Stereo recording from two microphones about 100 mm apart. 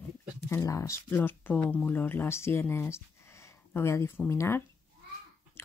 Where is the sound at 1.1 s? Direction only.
20° left (ahead or behind).